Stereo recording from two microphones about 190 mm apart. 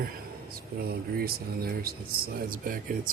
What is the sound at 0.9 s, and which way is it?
Speech, 55° right (ahead or behind).